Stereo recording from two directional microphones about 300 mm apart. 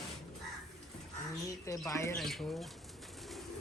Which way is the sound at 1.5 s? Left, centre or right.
Centre.